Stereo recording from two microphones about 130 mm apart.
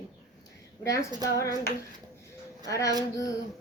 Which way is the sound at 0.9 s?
25° left (ahead or behind).